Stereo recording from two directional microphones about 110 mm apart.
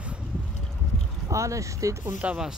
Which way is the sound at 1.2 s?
30° right (ahead or behind).